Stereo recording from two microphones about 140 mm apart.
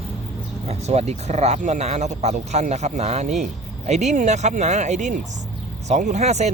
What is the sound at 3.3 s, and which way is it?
Speech, centre (ahead or behind).